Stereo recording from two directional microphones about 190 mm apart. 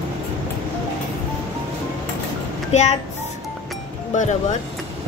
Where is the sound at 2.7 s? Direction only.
35° left (ahead or behind).